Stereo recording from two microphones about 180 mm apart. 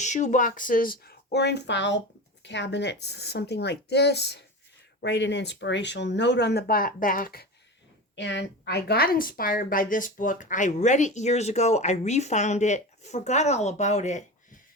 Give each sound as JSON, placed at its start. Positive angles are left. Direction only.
{"t": 0.0, "sound": "speech", "side_deg": 40}
{"t": 8.1, "sound": "a woman's voice", "side_deg": 80}